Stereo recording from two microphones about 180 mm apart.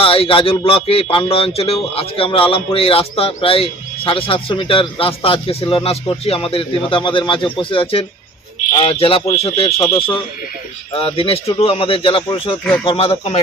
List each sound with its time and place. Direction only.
0.0 s speech: 30° left (ahead or behind)
10.9 s speech: 30° left (ahead or behind)